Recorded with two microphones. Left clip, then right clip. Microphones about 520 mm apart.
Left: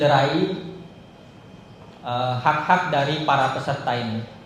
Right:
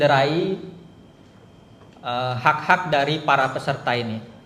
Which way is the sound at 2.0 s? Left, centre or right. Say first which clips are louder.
Right 1 dB; right.